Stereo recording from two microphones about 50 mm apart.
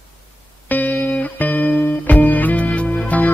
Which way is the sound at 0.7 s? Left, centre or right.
Left.